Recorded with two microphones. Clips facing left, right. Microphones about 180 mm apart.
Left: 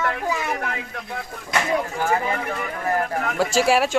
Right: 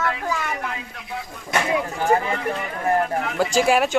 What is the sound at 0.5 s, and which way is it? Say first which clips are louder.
Speech: left 2 dB; 60° left (ahead or behind).